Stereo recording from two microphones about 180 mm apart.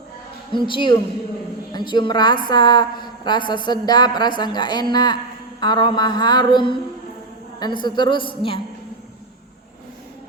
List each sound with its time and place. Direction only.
0.5 s a woman's voice: 25° left (ahead or behind)